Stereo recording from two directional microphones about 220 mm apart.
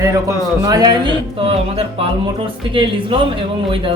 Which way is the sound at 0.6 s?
15° right (ahead or behind).